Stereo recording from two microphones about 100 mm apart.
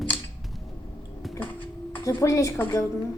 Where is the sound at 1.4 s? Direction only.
55° left (ahead or behind).